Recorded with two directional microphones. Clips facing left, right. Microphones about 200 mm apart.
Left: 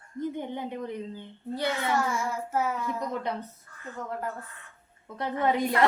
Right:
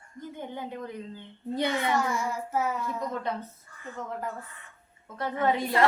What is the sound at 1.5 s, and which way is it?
Speech, 20° right (ahead or behind).